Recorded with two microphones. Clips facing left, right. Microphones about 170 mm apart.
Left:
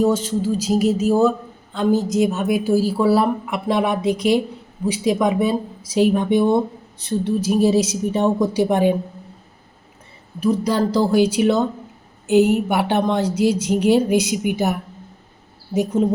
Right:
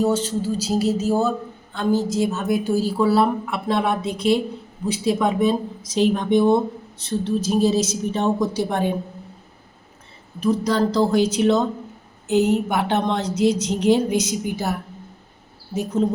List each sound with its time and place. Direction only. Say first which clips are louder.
0.0 s speech: left 2 dB; 15° left (ahead or behind)
10.4 s speech: left 1 dB; 10° left (ahead or behind)